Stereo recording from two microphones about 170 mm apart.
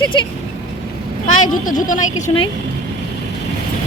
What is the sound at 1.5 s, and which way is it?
Speech, 50° left (ahead or behind).